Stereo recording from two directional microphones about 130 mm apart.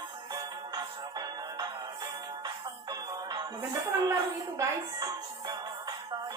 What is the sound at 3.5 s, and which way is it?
Speech, 25° right (ahead or behind).